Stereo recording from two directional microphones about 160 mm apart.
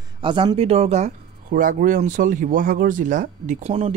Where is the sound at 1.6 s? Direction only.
55° right (ahead or behind).